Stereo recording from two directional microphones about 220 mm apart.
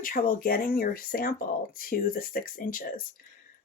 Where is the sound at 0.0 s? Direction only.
40° left (ahead or behind).